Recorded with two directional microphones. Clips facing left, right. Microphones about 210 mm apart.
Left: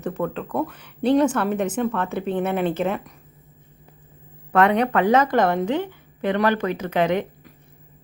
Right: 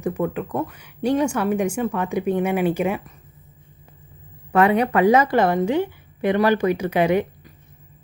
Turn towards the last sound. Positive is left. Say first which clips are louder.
# right 3 dB
turn(degrees=-10)  # may be behind; listen again after turning